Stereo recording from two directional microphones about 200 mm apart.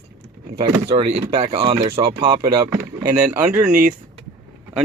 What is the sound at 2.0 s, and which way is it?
Speech, 50° right (ahead or behind).